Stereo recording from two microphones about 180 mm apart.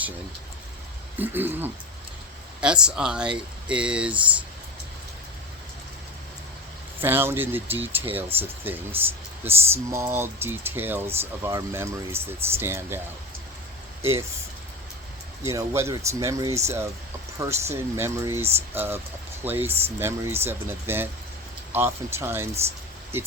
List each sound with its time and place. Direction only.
1.2 s speech: 10° right (ahead or behind)
7.0 s speech: 10° right (ahead or behind)
14.0 s speech: 15° right (ahead or behind)
15.4 s speech: 15° right (ahead or behind)